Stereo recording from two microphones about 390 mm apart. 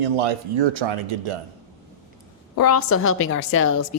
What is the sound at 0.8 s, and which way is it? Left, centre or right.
Speech, right.